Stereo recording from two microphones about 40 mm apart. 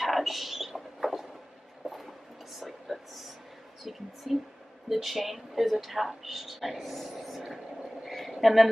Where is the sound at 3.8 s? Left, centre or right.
Centre.